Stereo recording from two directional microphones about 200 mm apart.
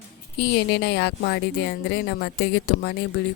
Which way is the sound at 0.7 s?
55° left (ahead or behind).